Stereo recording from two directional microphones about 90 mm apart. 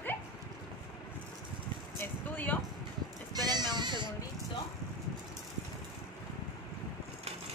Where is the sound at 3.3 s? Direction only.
50° right (ahead or behind).